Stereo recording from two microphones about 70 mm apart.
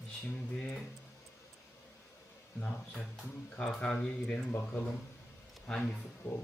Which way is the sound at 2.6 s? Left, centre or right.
Centre.